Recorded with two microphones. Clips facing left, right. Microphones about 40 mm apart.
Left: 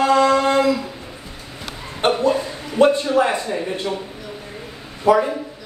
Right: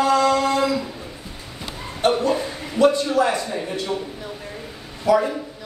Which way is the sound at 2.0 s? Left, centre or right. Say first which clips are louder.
Left 2 dB; left.